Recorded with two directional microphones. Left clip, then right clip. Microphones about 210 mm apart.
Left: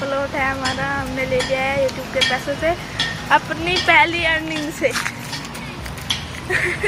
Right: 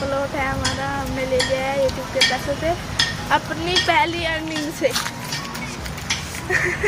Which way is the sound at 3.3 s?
10° left (ahead or behind).